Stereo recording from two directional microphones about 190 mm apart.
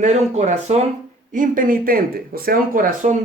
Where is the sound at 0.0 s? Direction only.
40° right (ahead or behind).